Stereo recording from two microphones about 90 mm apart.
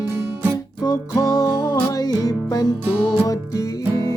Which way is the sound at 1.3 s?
45° left (ahead or behind).